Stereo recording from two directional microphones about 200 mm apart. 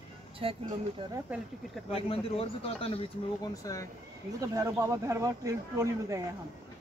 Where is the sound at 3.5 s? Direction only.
15° left (ahead or behind).